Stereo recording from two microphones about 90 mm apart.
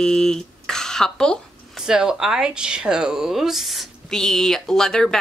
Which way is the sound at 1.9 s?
5° right (ahead or behind).